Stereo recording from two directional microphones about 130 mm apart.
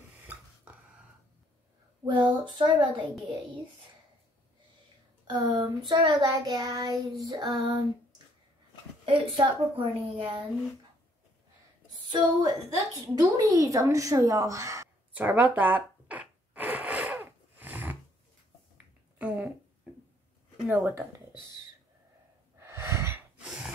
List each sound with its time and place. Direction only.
0.2 s a sound: 15° right (ahead or behind)
2.5 s child singing: 35° right (ahead or behind)
5.2 s child singing: 35° right (ahead or behind)
9.0 s child singing: 40° right (ahead or behind)
12.1 s a woman's voice: 35° right (ahead or behind)
15.1 s zipper: 15° right (ahead or behind)
19.1 s a sound: 10° right (ahead or behind)
20.6 s speech: 15° right (ahead or behind)
22.6 s breathing: 20° right (ahead or behind)